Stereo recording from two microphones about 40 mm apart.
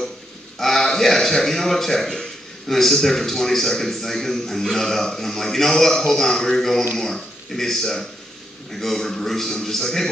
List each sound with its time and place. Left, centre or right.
0.6 s a man's voice: centre